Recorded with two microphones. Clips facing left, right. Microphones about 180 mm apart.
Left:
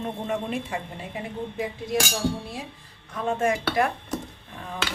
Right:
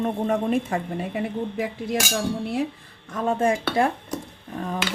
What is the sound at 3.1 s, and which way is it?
Speech, 45° right (ahead or behind).